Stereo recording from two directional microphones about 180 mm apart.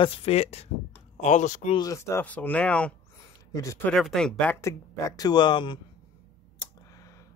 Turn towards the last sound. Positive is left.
turn(degrees=25)  # may be behind; listen again after turning